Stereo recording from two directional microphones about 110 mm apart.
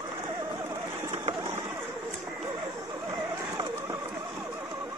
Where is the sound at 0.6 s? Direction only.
25° right (ahead or behind).